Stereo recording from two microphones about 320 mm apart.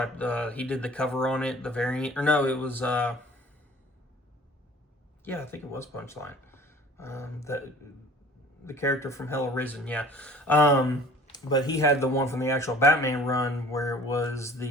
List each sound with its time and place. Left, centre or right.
0.0 s speech: centre
5.2 s speech: centre
8.6 s speech: centre